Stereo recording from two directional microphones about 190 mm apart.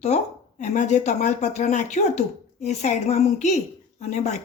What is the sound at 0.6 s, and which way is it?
Speech, 35° left (ahead or behind).